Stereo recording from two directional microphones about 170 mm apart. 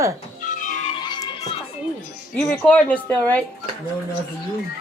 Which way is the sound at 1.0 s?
25° left (ahead or behind).